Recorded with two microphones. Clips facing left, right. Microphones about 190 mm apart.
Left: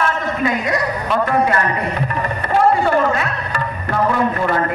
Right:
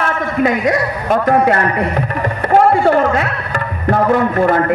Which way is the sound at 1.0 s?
45° right (ahead or behind).